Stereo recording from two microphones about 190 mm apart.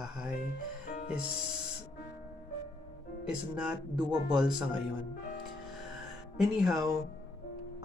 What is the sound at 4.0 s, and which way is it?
Speech, 25° right (ahead or behind).